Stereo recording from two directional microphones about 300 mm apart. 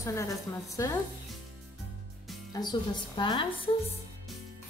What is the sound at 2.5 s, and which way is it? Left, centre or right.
Speech, centre.